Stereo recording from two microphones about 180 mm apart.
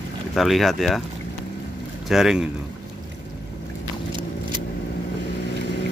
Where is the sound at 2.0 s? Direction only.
Centre (ahead or behind).